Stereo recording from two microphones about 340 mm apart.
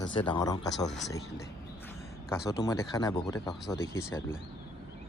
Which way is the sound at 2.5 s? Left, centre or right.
Centre.